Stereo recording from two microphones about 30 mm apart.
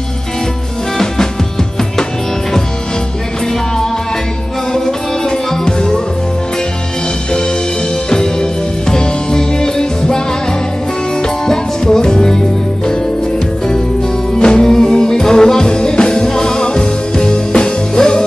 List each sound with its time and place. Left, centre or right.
0.9 s music: centre
4.7 s music: centre
8.1 s music: left
11.2 s music: centre
14.3 s music: left